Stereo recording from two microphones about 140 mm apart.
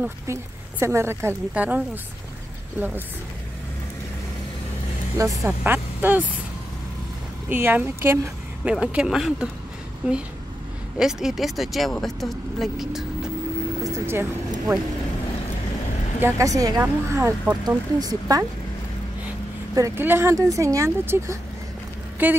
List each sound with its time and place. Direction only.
0.0 s speech: 20° right (ahead or behind)
5.1 s speech: 20° right (ahead or behind)
7.4 s speech: 15° right (ahead or behind)
13.8 s speech: 20° right (ahead or behind)
16.2 s speech: 20° right (ahead or behind)
19.7 s speech: 20° right (ahead or behind)